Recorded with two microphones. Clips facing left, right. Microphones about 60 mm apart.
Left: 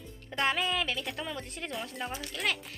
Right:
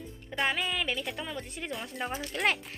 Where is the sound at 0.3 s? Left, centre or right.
Centre.